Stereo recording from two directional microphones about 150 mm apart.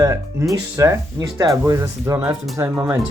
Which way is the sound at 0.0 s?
20° right (ahead or behind).